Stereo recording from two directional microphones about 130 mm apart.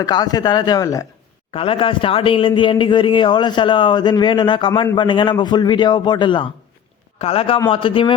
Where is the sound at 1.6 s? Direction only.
45° left (ahead or behind).